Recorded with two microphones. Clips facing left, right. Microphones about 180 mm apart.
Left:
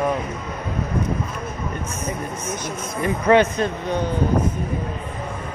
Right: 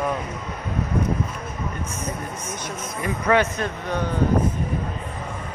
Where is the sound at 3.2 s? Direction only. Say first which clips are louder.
Left 4 dB; 25° left (ahead or behind).